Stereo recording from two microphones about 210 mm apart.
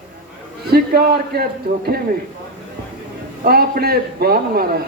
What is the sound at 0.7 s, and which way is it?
A man's voice, 50° right (ahead or behind).